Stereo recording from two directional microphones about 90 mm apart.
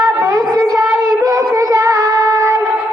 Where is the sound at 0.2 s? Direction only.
35° right (ahead or behind).